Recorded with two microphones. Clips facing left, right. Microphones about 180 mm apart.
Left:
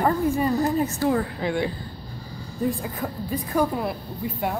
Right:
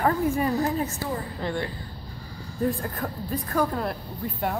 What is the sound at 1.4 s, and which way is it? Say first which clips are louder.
A woman's voice: left 4 dB; 10° left (ahead or behind).